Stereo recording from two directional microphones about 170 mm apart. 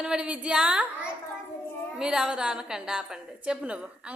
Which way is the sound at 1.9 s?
5° right (ahead or behind).